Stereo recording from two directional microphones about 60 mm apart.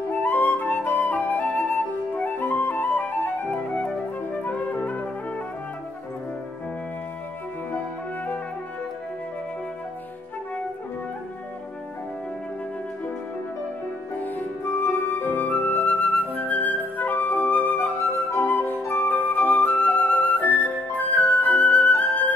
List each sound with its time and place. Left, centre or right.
0.1 s flute: left
14.8 s flute: left